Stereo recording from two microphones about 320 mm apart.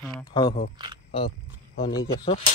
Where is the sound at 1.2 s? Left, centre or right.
Left.